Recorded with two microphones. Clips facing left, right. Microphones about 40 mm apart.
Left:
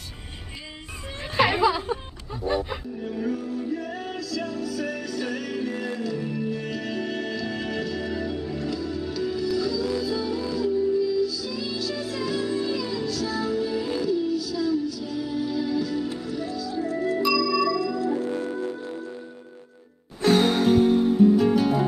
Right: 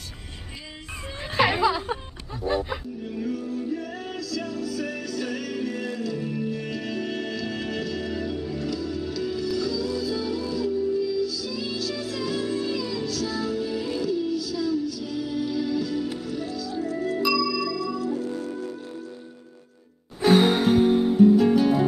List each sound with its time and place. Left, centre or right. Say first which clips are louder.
1.3 s a sound: left 1 dB; centre
2.4 s music: even; centre
3.2 s music: even; left
20.2 s music: right 1 dB; centre
21.4 s music: right 1 dB; centre